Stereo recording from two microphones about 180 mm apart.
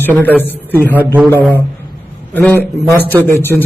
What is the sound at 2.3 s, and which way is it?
Speech, 10° left (ahead or behind).